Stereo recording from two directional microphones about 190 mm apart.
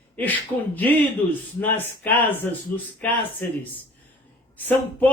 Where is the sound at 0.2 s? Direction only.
10° left (ahead or behind).